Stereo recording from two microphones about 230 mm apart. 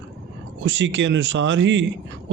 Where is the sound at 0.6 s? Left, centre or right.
Right.